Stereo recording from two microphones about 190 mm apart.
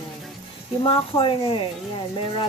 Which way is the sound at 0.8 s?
30° left (ahead or behind).